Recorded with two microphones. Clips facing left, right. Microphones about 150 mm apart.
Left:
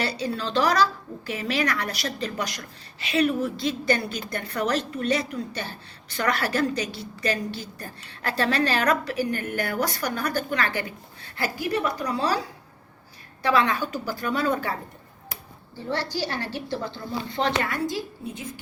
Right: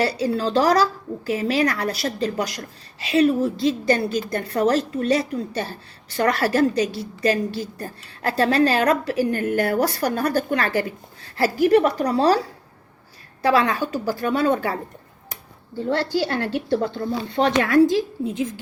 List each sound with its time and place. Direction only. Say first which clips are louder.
0.0 s a woman's voice: right 6 dB; 30° right (ahead or behind)
11.7 s a woman's voice: right 9 dB; 50° right (ahead or behind)
12.0 s a woman's voice: right 7 dB; 35° right (ahead or behind)
13.4 s a woman's voice: right 3 dB; 35° right (ahead or behind)
15.9 s a woman's voice: right 6 dB; 55° right (ahead or behind)
17.6 s a woman's voice: right 11 dB; 90° right